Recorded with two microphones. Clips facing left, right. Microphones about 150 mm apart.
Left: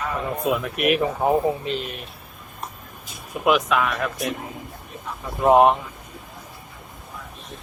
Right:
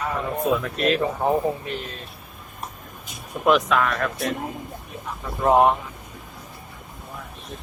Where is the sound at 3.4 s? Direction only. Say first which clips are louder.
Right 1 dB; 5° left (ahead or behind).